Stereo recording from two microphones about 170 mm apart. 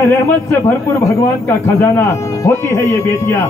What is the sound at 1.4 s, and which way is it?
Speech, 15° left (ahead or behind).